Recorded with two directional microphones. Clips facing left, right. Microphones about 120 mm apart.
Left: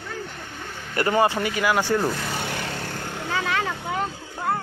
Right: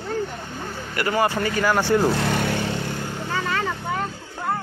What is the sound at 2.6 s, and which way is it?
Vehicle, 20° right (ahead or behind).